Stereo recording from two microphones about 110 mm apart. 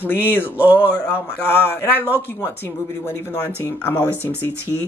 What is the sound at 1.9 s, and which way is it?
Speech, 15° right (ahead or behind).